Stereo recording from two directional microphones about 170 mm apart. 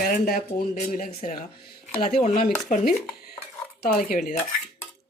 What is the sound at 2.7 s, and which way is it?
Speech, 50° left (ahead or behind).